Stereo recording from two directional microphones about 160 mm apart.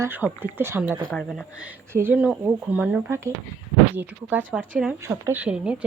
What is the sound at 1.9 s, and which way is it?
Speech, 10° right (ahead or behind).